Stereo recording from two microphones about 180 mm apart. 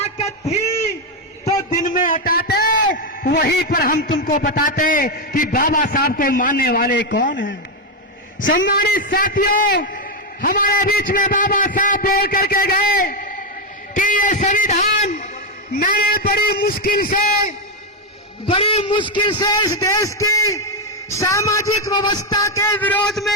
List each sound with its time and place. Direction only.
0.0 s a sound: 35° left (ahead or behind)
1.7 s a man's voice: 45° left (ahead or behind); by 7.3 s 80° left
8.4 s a man's voice: 50° left (ahead or behind)
9.7 s a man's voice: 60° left (ahead or behind)
13.9 s a sound: 45° left (ahead or behind)
15.7 s a man's voice: 55° left (ahead or behind)
18.4 s a man's voice: 30° left (ahead or behind); by 23.3 s 5° left (ahead or behind)